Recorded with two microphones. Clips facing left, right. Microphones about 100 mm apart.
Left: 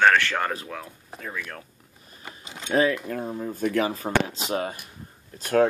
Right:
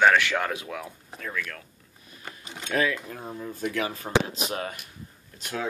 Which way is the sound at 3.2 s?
40° left (ahead or behind).